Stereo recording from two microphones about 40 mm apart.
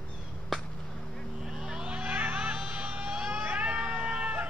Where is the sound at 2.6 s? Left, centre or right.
Right.